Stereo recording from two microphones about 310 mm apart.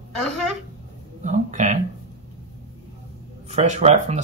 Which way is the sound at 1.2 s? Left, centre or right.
Right.